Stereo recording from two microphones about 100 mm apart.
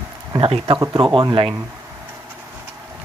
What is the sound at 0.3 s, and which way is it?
Speech, 70° right (ahead or behind).